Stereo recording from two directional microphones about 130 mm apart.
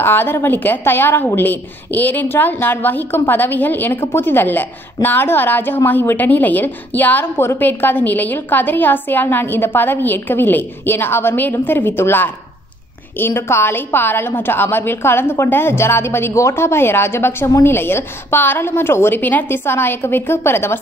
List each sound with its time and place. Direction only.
0.0 s a woman's voice: 15° left (ahead or behind)